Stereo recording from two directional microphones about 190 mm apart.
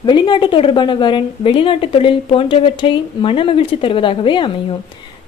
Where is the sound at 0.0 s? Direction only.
25° left (ahead or behind).